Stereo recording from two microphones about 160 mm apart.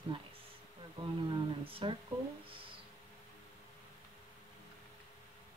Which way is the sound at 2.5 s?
35° right (ahead or behind).